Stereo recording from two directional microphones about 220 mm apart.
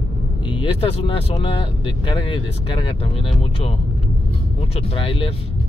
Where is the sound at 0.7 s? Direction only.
25° left (ahead or behind).